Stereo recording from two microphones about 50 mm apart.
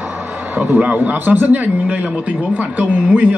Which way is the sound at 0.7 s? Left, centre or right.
Right.